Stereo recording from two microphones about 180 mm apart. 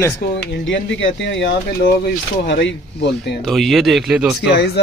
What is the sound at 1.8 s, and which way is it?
Speech, 55° left (ahead or behind).